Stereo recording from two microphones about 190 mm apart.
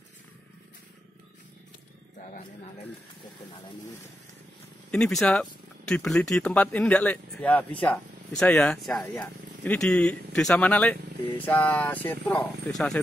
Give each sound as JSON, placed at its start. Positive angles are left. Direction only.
{"t": 2.1, "sound": "speech", "side_deg": 40}
{"t": 4.9, "sound": "speech", "side_deg": 5}